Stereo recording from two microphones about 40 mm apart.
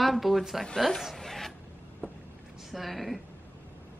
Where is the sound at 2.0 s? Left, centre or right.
Right.